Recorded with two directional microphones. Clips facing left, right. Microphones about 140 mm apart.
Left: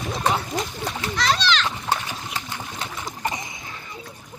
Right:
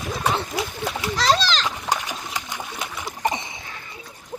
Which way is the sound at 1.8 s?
15° right (ahead or behind).